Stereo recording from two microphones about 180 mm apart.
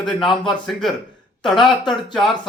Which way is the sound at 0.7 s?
Centre (ahead or behind).